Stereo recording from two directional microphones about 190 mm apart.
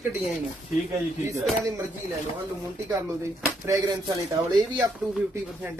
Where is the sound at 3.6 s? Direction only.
20° right (ahead or behind).